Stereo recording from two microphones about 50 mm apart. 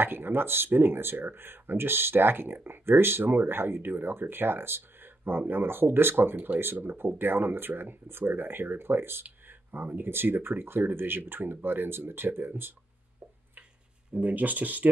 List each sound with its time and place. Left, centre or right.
0.0 s speech: right
6.3 s speech: right
6.6 s speech: right
14.1 s speech: right